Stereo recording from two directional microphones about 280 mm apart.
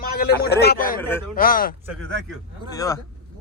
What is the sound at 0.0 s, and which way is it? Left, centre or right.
Speech, left.